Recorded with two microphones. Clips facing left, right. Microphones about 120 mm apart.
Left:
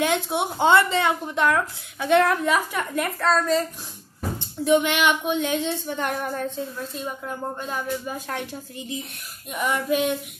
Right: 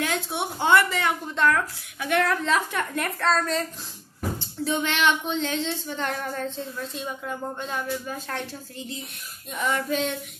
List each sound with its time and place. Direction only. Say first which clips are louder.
0.0 s speech: left 5 dB; 20° left (ahead or behind)
2.4 s speech: left 2 dB; 10° left (ahead or behind)
4.4 s speech: left 9 dB; 15° left (ahead or behind)